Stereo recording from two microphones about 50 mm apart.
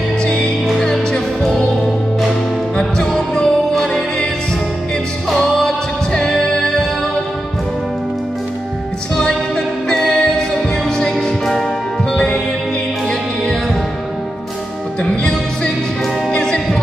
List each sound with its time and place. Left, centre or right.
0.2 s music: centre
0.7 s music: centre
2.8 s music: centre
5.3 s music: centre
9.8 s music: centre
15.0 s music: centre